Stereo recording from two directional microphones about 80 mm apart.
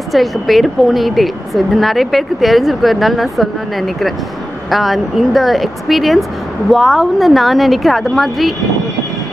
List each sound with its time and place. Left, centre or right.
0.1 s speech: centre